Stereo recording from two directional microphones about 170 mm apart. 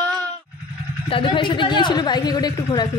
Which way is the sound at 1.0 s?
30° left (ahead or behind).